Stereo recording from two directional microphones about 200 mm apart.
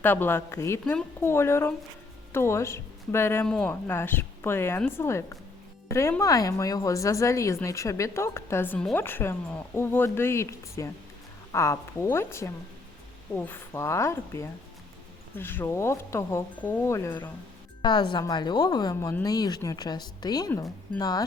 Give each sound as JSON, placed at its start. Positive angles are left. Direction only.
{"t": 0.0, "sound": "speech", "side_deg": 10}